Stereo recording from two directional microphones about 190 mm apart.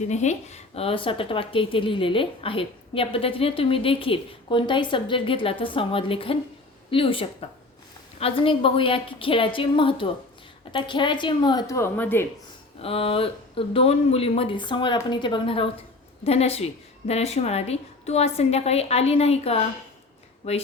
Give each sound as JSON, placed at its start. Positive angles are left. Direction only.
{"t": 0.1, "sound": "a woman's voice", "side_deg": 40}
{"t": 12.8, "sound": "a woman's voice", "side_deg": 30}